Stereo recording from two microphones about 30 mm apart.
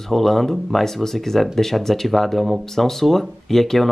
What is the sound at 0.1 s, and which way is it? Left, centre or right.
Speech, centre.